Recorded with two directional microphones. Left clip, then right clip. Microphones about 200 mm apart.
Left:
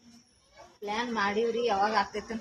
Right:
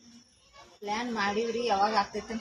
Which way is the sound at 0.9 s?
35° right (ahead or behind).